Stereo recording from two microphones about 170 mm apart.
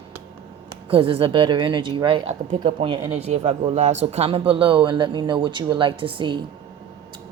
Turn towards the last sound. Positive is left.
turn(degrees=-30)  # may be behind; listen again after turning